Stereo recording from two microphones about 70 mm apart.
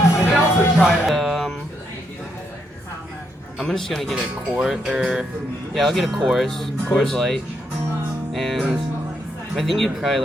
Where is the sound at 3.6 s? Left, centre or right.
Centre.